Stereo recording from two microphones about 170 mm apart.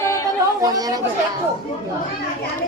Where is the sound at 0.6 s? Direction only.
20° right (ahead or behind).